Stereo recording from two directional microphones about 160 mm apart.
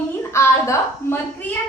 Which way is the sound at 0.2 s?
15° left (ahead or behind).